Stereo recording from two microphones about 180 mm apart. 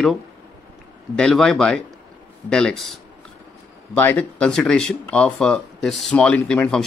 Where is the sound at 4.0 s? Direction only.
10° left (ahead or behind).